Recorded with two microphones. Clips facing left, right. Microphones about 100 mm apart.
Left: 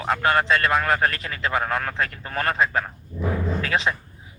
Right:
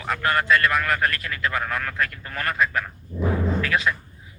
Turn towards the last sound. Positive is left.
turn(degrees=25)  # may be behind; listen again after turning